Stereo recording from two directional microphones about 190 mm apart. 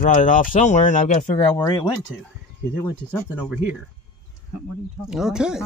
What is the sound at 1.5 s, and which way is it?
Speech, 20° left (ahead or behind).